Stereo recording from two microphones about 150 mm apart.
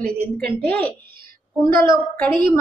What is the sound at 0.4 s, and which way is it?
A woman's voice, 10° left (ahead or behind).